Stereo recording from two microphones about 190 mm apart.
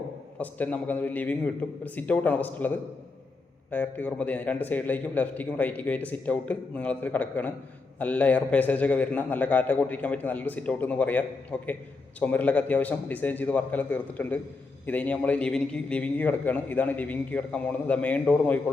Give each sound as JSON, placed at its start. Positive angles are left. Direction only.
{"t": 0.3, "sound": "a man's voice", "side_deg": 10}